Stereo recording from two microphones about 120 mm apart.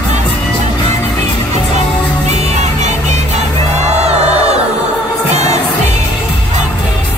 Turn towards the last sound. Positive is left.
turn(degrees=-65)  # may be behind; listen again after turning